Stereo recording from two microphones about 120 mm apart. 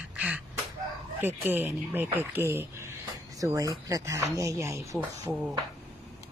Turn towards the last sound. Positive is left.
turn(degrees=-5)  # may be behind; listen again after turning